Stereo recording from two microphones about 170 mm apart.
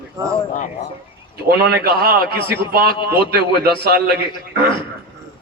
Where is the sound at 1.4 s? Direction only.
65° right (ahead or behind).